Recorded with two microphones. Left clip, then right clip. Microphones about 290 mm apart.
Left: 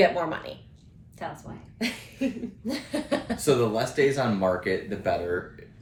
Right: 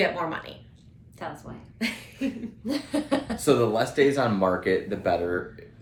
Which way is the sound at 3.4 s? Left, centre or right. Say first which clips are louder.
Right 2 dB; centre.